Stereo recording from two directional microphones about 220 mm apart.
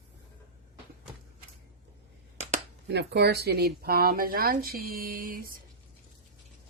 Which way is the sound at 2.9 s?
50° right (ahead or behind).